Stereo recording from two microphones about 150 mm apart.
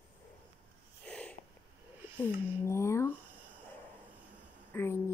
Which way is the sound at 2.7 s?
20° left (ahead or behind).